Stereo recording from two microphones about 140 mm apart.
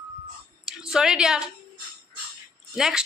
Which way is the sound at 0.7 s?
5° right (ahead or behind).